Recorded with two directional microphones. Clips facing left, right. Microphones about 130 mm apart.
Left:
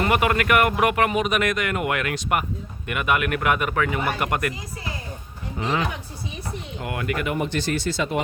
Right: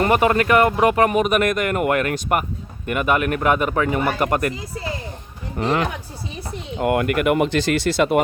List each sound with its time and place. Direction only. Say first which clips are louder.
0.0 s a man's voice: right 4 dB; 35° right (ahead or behind)
1.1 s a man's voice: right 4 dB; 45° right (ahead or behind)
6.7 s speech: right 9 dB; 55° right (ahead or behind); by 8.2 s 70° right (ahead or behind)